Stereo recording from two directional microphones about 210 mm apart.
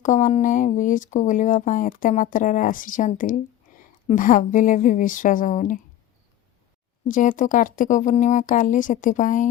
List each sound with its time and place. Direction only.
0.0 s speech: 35° left (ahead or behind)
3.7 s a sound: 40° left (ahead or behind)
4.0 s speech: 40° left (ahead or behind)
7.1 s speech: 40° left (ahead or behind)